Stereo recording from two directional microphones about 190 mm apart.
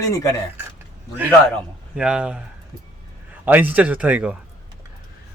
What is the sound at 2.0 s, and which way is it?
Speech, 5° right (ahead or behind).